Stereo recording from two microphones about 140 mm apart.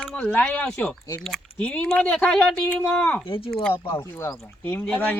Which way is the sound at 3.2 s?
40° left (ahead or behind).